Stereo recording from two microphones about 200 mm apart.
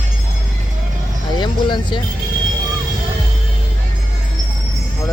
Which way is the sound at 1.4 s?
25° left (ahead or behind).